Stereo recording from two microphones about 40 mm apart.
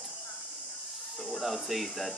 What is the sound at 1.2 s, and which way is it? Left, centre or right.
Speech, centre.